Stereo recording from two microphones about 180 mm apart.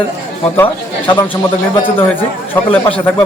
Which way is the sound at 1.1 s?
25° left (ahead or behind).